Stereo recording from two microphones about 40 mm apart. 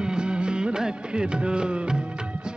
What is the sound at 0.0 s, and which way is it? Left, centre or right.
Music, right.